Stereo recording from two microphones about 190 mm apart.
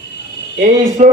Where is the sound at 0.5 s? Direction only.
40° right (ahead or behind).